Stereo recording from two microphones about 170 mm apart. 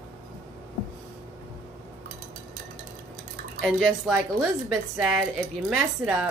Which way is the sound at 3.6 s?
5° left (ahead or behind).